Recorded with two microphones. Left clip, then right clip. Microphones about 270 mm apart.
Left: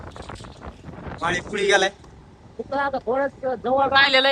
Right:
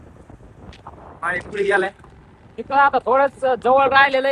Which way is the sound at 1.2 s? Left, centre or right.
Centre.